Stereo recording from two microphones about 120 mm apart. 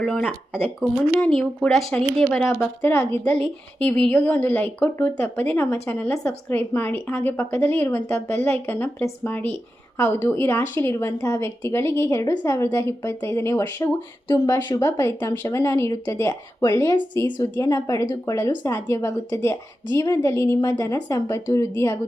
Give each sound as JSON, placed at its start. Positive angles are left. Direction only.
{"t": 0.0, "sound": "speech", "side_deg": 5}
{"t": 1.2, "sound": "a woman's voice", "side_deg": 5}